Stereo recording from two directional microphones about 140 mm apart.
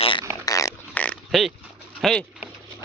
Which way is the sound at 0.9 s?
10° left (ahead or behind).